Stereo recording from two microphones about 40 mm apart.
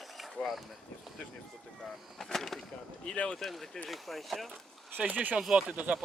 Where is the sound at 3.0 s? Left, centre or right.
Centre.